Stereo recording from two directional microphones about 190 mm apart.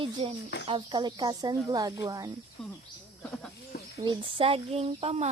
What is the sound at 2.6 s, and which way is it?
Speech, 5° left (ahead or behind).